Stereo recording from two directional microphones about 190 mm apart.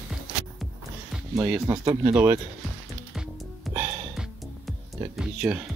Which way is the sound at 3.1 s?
Centre (ahead or behind).